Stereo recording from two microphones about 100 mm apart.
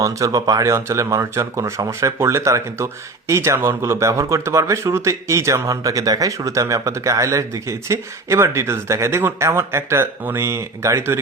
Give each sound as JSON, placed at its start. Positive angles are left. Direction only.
{"t": 0.0, "sound": "speech", "side_deg": -35}